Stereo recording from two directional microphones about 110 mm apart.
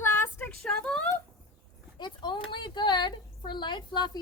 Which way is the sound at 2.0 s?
45° left (ahead or behind).